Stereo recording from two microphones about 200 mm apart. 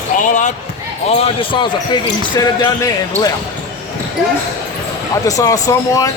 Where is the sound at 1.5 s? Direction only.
20° left (ahead or behind).